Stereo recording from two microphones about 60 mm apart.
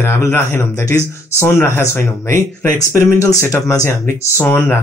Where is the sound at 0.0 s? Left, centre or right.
Left.